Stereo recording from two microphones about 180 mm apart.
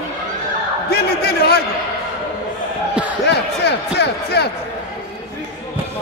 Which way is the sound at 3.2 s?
65° left (ahead or behind).